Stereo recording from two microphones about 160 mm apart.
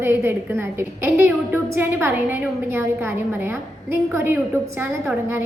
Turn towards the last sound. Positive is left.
turn(degrees=-15)  # may be behind; listen again after turning